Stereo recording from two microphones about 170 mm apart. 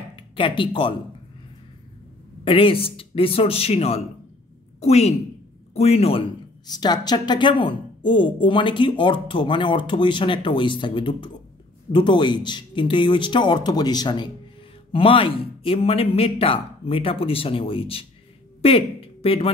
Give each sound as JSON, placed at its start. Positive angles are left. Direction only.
{"t": 0.1, "sound": "speech", "side_deg": 30}
{"t": 2.4, "sound": "speech", "side_deg": 30}
{"t": 6.7, "sound": "a woman's voice", "side_deg": 25}